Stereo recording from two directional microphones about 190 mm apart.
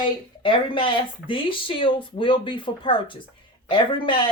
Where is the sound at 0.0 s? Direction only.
25° left (ahead or behind).